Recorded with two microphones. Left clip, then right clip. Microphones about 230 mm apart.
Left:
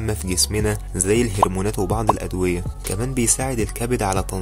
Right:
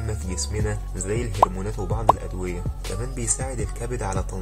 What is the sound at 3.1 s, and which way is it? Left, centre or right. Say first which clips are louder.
Speech: left 9 dB; left.